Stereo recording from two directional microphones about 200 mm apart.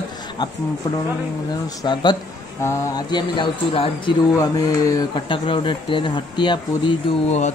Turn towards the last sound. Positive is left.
turn(degrees=35)  # may be behind; listen again after turning